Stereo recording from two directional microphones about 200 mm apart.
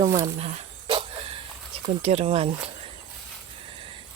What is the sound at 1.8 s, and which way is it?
Speech, 30° right (ahead or behind).